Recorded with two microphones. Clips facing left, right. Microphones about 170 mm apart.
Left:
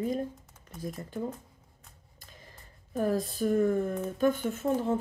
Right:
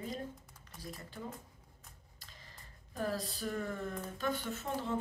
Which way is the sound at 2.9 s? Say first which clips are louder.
Left 9 dB; 50° left (ahead or behind).